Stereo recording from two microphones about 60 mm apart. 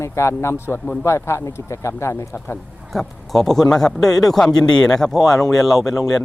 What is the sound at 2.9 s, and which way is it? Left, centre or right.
A man's voice, centre.